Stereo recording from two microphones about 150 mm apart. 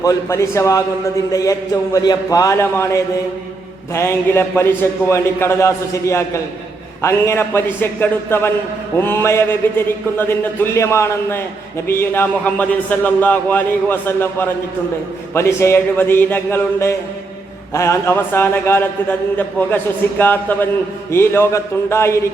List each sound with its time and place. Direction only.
0.0 s a man's voice: 20° left (ahead or behind)